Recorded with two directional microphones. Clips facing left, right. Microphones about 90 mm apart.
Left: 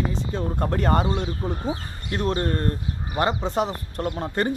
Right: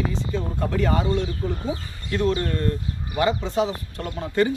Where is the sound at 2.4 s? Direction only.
40° left (ahead or behind).